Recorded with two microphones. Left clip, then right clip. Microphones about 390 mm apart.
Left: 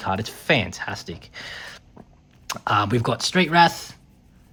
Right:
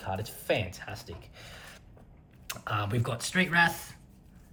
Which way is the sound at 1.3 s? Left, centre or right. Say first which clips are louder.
Left 12 dB; centre.